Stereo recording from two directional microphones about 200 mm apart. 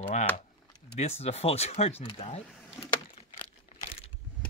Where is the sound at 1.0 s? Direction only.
30° left (ahead or behind).